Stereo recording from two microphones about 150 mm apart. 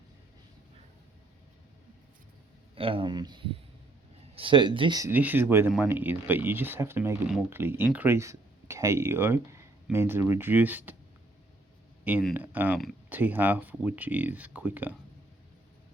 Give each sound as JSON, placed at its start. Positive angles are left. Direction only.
{"t": 2.7, "sound": "speech", "side_deg": -35}
{"t": 5.1, "sound": "speech", "side_deg": -10}
{"t": 12.3, "sound": "speech", "side_deg": -10}